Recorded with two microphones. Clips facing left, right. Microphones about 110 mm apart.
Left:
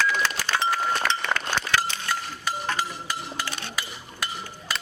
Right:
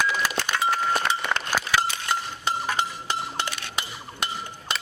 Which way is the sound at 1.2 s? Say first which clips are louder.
Even; 10° right (ahead or behind).